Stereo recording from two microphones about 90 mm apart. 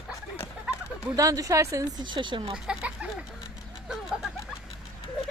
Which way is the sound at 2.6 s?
10° right (ahead or behind).